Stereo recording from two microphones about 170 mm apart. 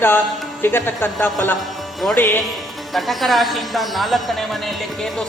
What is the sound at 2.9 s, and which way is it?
Speech, centre (ahead or behind).